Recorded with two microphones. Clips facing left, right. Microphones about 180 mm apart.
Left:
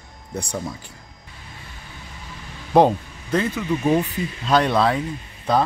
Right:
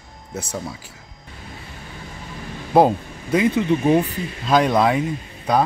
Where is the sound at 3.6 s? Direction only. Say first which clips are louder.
Right 2 dB; 25° right (ahead or behind).